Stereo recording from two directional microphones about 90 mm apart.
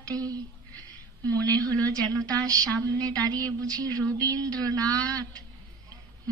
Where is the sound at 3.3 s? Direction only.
45° right (ahead or behind).